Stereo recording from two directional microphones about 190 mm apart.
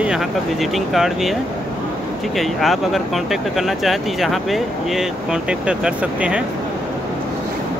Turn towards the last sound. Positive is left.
turn(degrees=-5)  # may be behind; listen again after turning